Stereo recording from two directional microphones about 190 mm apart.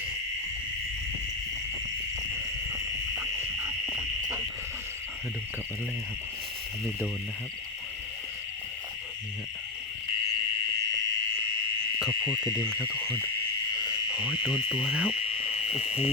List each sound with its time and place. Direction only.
2.7 s a sound: 10° right (ahead or behind)
12.2 s insect: 15° left (ahead or behind)
14.3 s insect: 5° right (ahead or behind)